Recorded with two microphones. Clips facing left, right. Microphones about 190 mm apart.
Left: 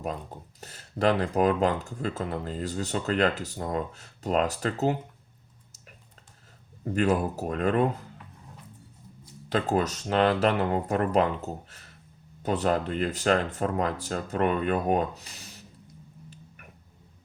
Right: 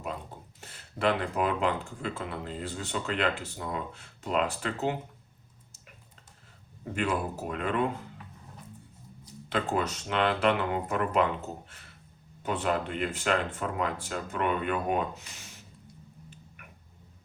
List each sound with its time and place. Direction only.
0.6 s speech: 40° left (ahead or behind)
6.9 s speech: 40° left (ahead or behind)
9.5 s speech: 40° left (ahead or behind)